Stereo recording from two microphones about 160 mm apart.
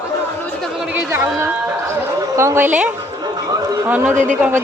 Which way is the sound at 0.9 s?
15° right (ahead or behind).